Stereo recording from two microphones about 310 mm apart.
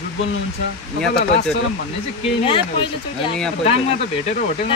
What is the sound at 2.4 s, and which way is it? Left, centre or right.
Speech, centre.